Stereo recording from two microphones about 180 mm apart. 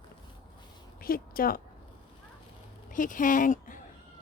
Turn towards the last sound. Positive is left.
turn(degrees=45)  # may be behind; listen again after turning